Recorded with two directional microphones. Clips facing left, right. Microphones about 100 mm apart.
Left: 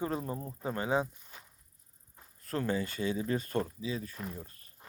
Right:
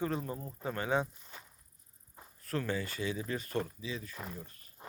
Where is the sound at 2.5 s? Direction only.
30° left (ahead or behind).